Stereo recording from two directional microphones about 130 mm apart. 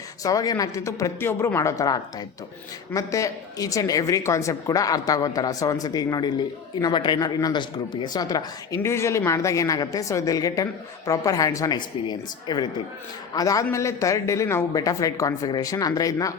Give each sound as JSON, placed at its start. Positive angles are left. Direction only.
{"t": 0.2, "sound": "speech", "side_deg": 30}